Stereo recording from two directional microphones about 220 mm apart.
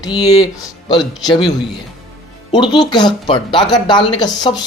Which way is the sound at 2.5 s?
20° left (ahead or behind).